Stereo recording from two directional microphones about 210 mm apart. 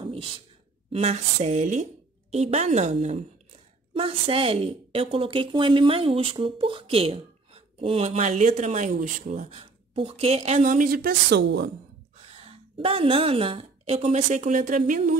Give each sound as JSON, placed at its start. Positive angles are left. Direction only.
{"t": 0.0, "sound": "a sound", "side_deg": -25}
{"t": 0.9, "sound": "a woman's voice", "side_deg": -30}
{"t": 12.4, "sound": "a woman's voice", "side_deg": -25}